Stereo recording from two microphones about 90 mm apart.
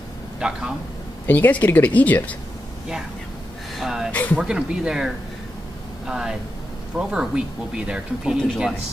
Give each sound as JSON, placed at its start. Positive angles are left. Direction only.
{"t": 0.4, "sound": "speech", "side_deg": -10}
{"t": 1.2, "sound": "speech", "side_deg": 20}
{"t": 3.8, "sound": "speech", "side_deg": -5}
{"t": 4.1, "sound": "speech", "side_deg": 20}
{"t": 4.4, "sound": "speech", "side_deg": -10}